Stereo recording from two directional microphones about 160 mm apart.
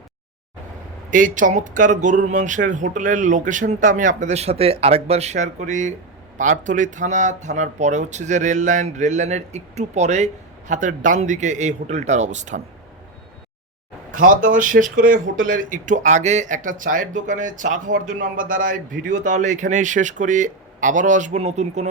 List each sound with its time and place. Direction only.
1.1 s speech: 55° right (ahead or behind)
14.1 s speech: 55° right (ahead or behind)